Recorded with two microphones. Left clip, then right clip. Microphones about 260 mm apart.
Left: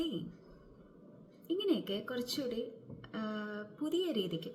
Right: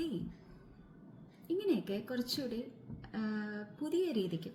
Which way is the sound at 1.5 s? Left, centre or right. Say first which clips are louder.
Left 1 dB; centre.